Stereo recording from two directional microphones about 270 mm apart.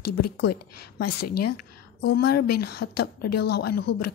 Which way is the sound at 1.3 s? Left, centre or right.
Left.